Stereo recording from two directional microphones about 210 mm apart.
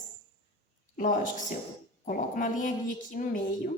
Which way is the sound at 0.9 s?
40° left (ahead or behind).